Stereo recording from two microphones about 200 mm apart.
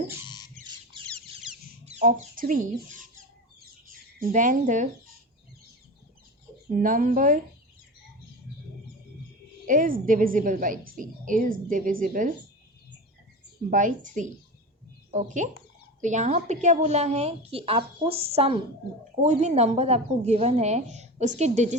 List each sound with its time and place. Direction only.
0.3 s rodents: 20° left (ahead or behind)
1.0 s chicken: centre (ahead or behind)
1.8 s chicken: 35° right (ahead or behind)
2.0 s a woman's voice: 45° right (ahead or behind)
6.7 s a woman's voice: 45° right (ahead or behind)
9.6 s a woman's voice: 45° right (ahead or behind)
13.7 s a woman's voice: 40° right (ahead or behind)